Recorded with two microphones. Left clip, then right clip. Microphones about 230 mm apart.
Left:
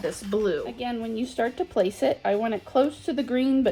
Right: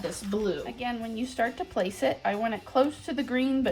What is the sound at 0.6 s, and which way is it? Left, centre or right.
Speech, centre.